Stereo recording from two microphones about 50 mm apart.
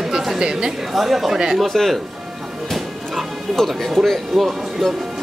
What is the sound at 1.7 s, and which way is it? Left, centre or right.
Speech, centre.